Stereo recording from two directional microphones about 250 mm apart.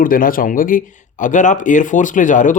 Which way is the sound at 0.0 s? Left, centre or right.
Left.